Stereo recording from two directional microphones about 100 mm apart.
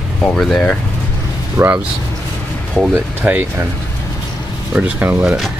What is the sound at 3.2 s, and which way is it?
Speech, 15° right (ahead or behind).